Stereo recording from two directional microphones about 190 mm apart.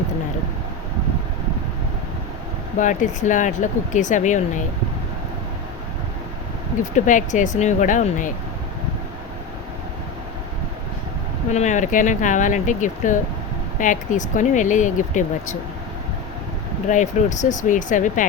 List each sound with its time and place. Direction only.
2.7 s speech: 40° left (ahead or behind)
6.9 s speech: 40° left (ahead or behind)
11.5 s speech: 40° left (ahead or behind)
16.9 s speech: 40° left (ahead or behind)